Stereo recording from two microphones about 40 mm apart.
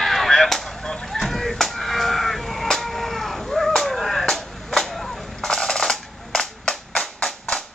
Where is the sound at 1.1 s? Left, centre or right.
Centre.